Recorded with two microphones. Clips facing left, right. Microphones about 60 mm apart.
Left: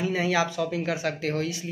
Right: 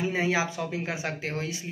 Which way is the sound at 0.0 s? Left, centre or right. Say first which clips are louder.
Left 2 dB; right.